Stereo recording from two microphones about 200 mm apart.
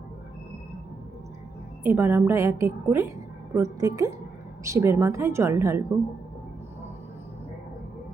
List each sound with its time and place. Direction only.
1.8 s a woman's voice: 10° right (ahead or behind)